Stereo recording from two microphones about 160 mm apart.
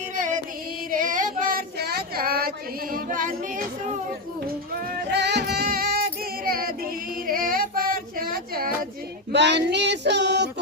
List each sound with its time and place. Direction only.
0.9 s child singing: 55° right (ahead or behind)
2.9 s singing: 55° right (ahead or behind)
5.1 s music: 90° right; by 6.7 s 65° right (ahead or behind)
7.3 s female singing: 60° right (ahead or behind)
9.3 s female singing: 90° right